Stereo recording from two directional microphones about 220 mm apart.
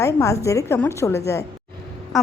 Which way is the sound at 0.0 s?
15° left (ahead or behind).